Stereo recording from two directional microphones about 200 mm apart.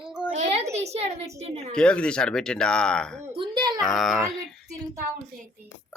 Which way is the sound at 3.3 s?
25° right (ahead or behind).